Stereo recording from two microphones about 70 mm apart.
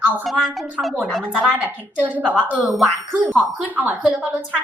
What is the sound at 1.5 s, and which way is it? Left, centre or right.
Speech, right.